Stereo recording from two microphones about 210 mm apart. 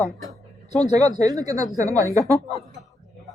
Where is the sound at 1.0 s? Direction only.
15° right (ahead or behind).